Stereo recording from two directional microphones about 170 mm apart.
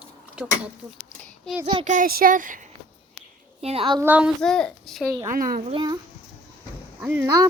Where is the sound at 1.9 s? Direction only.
55° right (ahead or behind).